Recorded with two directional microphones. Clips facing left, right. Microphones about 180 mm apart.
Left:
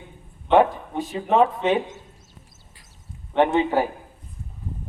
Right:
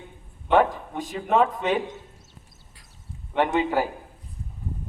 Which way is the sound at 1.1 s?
25° left (ahead or behind).